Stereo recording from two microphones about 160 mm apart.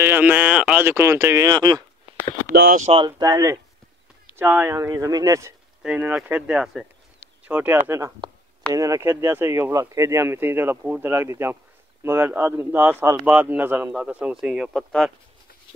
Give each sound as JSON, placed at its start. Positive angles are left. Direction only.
{"t": 0.0, "sound": "speech", "side_deg": -10}
{"t": 2.5, "sound": "speech", "side_deg": -80}
{"t": 2.8, "sound": "speech", "side_deg": -35}
{"t": 3.1, "sound": "speech", "side_deg": -20}
{"t": 5.8, "sound": "speech", "side_deg": -10}
{"t": 8.2, "sound": "a sound", "side_deg": -30}
{"t": 8.7, "sound": "speech", "side_deg": -20}